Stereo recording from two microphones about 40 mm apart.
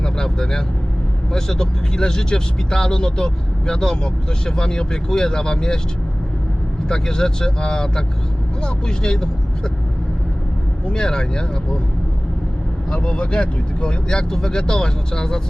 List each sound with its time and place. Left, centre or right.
0.0 s vehicle: centre
1.3 s speech: centre
6.8 s speech: centre
10.8 s speech: centre
12.9 s speech: left